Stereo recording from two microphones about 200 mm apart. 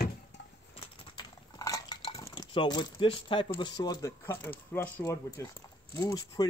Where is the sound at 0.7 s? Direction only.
20° left (ahead or behind).